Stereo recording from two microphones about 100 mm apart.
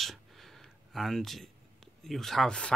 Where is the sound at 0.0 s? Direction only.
Centre (ahead or behind).